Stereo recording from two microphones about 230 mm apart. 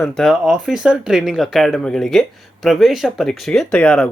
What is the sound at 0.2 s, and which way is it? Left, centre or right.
Speech, centre.